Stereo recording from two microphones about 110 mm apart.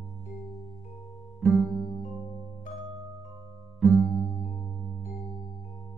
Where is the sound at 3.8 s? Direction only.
Centre (ahead or behind).